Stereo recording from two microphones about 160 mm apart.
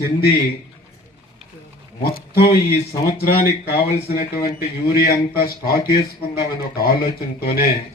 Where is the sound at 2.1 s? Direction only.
75° left (ahead or behind).